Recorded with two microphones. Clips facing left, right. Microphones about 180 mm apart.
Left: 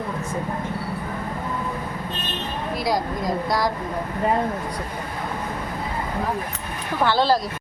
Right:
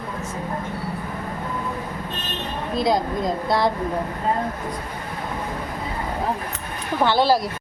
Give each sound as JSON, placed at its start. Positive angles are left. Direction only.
{"t": 2.7, "sound": "speech", "side_deg": -25}
{"t": 7.0, "sound": "speech", "side_deg": -15}